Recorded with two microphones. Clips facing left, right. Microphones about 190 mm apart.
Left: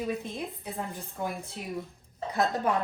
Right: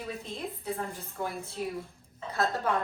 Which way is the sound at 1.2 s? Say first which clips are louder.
Right 1 dB; 15° left (ahead or behind).